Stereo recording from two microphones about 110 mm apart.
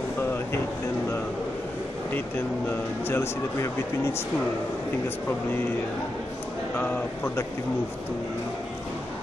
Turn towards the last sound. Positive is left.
turn(degrees=20)  # may be behind; listen again after turning